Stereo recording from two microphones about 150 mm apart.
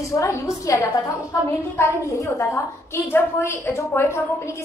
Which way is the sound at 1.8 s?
15° left (ahead or behind).